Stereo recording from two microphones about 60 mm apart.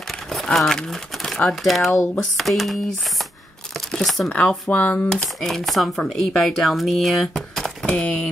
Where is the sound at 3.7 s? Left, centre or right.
Centre.